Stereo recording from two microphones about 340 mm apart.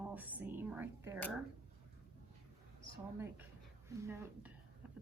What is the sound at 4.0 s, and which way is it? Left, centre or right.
Speech, centre.